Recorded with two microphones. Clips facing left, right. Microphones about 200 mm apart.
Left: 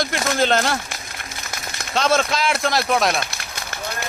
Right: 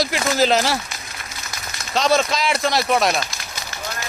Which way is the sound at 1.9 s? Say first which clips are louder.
Right 1 dB; centre (ahead or behind).